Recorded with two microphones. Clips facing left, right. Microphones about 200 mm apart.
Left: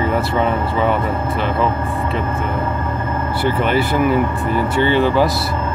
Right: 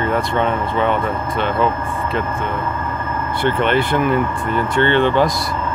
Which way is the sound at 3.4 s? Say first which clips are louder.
Right 1 dB; 5° left (ahead or behind).